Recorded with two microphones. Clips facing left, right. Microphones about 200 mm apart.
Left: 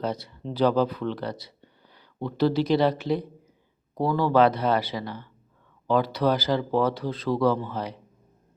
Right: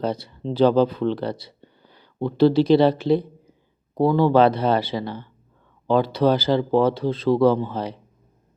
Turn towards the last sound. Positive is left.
turn(degrees=-30)  # may be behind; listen again after turning